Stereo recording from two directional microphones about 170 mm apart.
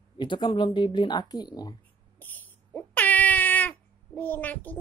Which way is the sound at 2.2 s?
10° left (ahead or behind).